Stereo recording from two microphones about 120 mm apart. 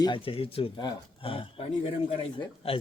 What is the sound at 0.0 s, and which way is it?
Speech, 45° left (ahead or behind).